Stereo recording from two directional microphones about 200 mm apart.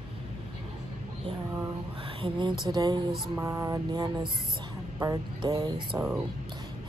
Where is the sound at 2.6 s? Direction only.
20° right (ahead or behind).